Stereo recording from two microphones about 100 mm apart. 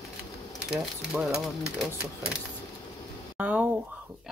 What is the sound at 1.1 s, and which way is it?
Speech, 5° right (ahead or behind).